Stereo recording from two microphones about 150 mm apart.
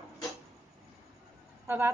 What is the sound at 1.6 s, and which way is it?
Vehicle, 15° right (ahead or behind).